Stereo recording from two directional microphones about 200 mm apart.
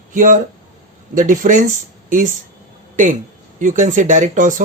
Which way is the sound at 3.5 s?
40° right (ahead or behind).